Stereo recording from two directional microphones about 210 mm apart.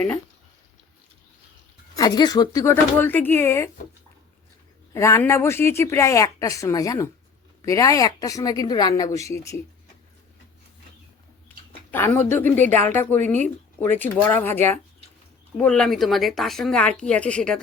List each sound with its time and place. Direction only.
2.0 s speech: 20° left (ahead or behind)
4.9 s speech: 15° left (ahead or behind)
11.4 s a sound: 10° left (ahead or behind)
12.9 s speech: 10° left (ahead or behind)
13.4 s speech: 35° right (ahead or behind)
14.0 s speech: 10° left (ahead or behind)